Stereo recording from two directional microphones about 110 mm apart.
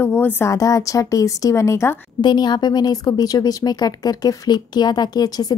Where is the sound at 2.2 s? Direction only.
40° left (ahead or behind).